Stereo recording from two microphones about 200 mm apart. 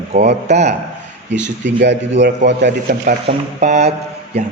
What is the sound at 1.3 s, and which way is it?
Speech, 60° right (ahead or behind).